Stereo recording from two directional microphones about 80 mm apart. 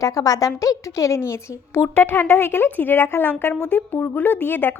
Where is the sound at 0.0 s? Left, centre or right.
Left.